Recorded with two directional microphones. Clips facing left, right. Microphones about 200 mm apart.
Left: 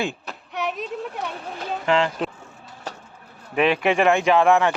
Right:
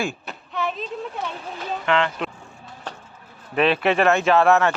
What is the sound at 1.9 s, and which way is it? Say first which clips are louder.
Speech: left 1 dB; 35° left (ahead or behind).